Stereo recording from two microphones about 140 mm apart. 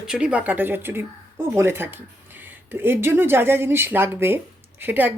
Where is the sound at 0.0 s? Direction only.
5° right (ahead or behind).